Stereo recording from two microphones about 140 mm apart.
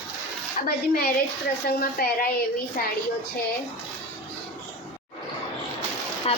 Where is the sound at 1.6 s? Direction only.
90° left.